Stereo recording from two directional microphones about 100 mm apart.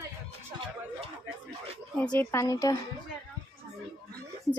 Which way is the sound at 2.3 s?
30° left (ahead or behind).